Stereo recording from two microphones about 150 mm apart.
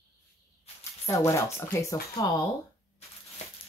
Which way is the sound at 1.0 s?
20° left (ahead or behind).